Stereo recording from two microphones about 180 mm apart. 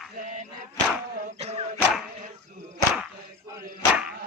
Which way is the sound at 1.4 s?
35° right (ahead or behind).